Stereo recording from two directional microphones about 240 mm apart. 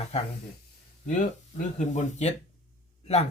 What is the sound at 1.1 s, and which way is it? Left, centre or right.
Speech, left.